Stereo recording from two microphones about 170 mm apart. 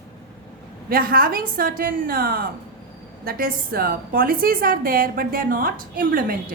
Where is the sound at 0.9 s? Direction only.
60° right (ahead or behind).